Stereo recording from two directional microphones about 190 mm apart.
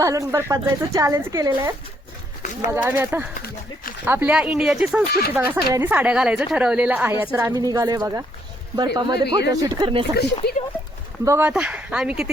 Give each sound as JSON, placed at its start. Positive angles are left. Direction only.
{"t": 0.0, "sound": "a woman's voice", "side_deg": -15}
{"t": 10.4, "sound": "speech", "side_deg": 60}
{"t": 11.3, "sound": "speech", "side_deg": -10}